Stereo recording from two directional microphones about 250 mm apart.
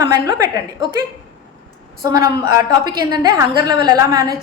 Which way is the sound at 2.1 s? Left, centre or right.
Centre.